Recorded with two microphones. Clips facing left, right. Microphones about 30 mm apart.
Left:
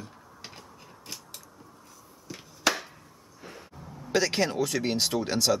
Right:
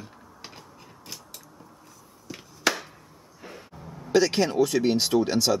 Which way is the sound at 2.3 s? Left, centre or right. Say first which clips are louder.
Right 1 dB; centre.